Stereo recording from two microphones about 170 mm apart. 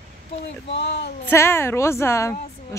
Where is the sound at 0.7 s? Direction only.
80° left.